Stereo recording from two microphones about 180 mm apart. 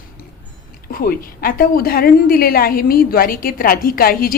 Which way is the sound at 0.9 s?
55° left (ahead or behind).